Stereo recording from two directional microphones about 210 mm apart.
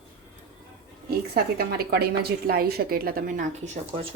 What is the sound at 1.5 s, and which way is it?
A woman's voice, 50° right (ahead or behind).